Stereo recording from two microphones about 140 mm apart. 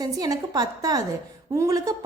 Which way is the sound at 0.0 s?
25° right (ahead or behind).